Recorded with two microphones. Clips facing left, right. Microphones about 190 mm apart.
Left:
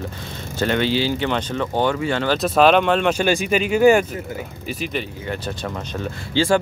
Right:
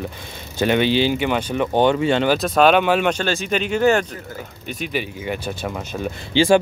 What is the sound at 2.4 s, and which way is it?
Speech, centre (ahead or behind).